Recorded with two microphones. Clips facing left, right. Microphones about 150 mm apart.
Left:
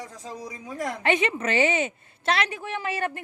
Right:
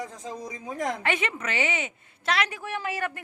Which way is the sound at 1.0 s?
20° left (ahead or behind).